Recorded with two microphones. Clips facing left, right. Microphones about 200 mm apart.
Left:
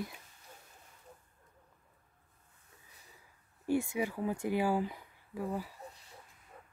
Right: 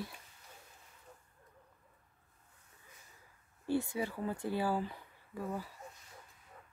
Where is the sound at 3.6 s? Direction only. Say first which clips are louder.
Left 2 dB; 10° left (ahead or behind).